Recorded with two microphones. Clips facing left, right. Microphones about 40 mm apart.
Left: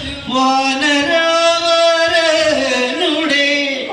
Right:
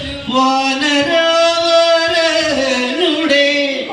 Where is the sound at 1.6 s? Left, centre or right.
Right.